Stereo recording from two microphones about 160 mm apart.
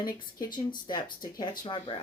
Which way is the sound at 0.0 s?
25° left (ahead or behind).